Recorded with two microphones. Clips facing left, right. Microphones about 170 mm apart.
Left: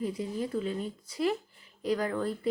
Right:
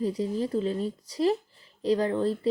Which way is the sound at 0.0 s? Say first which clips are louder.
Right 5 dB; 35° right (ahead or behind).